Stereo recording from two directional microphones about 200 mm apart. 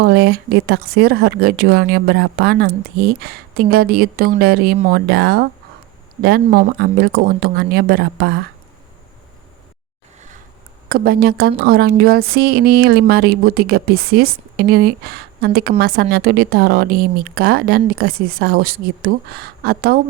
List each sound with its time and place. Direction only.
0.0 s speech: 50° right (ahead or behind)
10.8 s speech: 50° right (ahead or behind)